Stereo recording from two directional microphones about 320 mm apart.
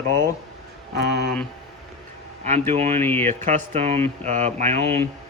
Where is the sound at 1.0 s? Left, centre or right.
Right.